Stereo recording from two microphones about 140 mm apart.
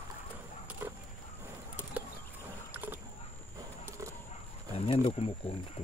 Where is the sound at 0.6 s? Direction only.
15° right (ahead or behind).